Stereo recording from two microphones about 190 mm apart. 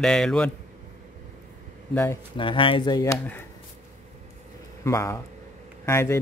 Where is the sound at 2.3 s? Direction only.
25° left (ahead or behind).